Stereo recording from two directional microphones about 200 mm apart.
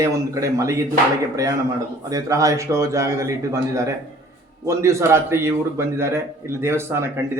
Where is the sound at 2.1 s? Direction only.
15° right (ahead or behind).